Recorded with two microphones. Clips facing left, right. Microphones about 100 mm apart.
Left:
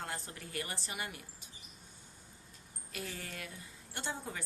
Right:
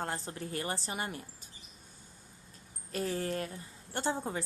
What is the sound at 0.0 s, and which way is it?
Speech, 30° right (ahead or behind).